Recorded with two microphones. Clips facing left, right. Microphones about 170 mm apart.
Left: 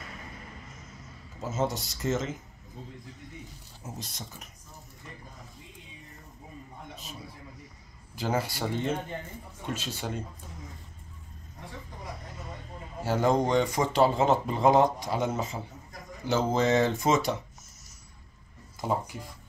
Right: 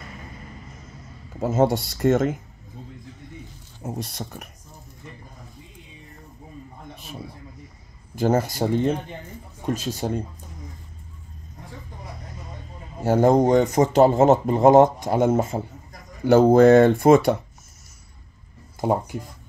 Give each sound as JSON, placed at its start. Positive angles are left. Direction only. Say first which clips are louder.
{"t": 1.4, "sound": "speech", "louder": "right 10 dB", "side_deg": -60}
{"t": 3.8, "sound": "speech", "louder": "right 10 dB", "side_deg": -60}
{"t": 8.2, "sound": "a man's voice", "louder": "right 9 dB", "side_deg": -45}
{"t": 13.0, "sound": "speech", "louder": "right 8 dB", "side_deg": -45}
{"t": 18.8, "sound": "speech", "louder": "right 7 dB", "side_deg": -55}